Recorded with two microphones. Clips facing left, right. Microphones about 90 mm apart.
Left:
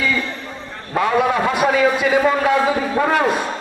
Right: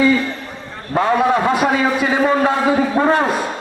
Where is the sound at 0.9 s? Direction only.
35° right (ahead or behind).